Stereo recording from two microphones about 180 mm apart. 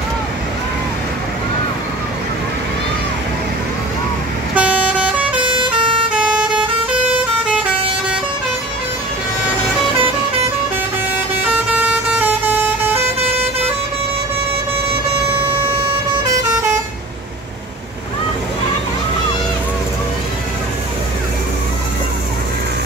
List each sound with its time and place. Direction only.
4.6 s vehicle: 10° right (ahead or behind)
5.4 s vehicle: 25° right (ahead or behind)
5.7 s vehicle: 5° right (ahead or behind)
11.4 s vehicle: 10° right (ahead or behind)